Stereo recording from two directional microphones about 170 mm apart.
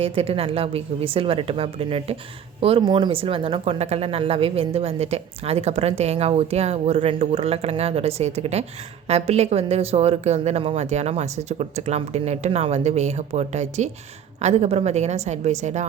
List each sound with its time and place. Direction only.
0.0 s speech: 35° right (ahead or behind)